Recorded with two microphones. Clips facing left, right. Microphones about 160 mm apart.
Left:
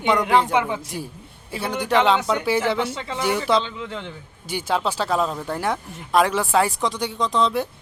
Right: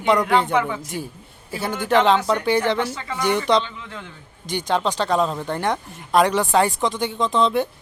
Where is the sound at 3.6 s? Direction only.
25° left (ahead or behind).